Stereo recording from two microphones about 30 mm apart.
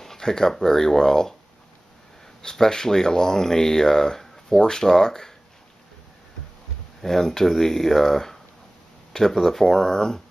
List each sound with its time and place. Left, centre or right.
0.0 s speech: centre
2.4 s speech: centre
7.0 s speech: centre